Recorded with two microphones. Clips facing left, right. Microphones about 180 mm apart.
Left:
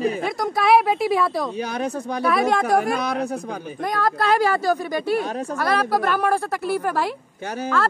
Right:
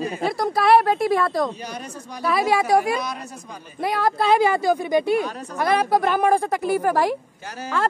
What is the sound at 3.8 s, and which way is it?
A woman's voice, 10° right (ahead or behind).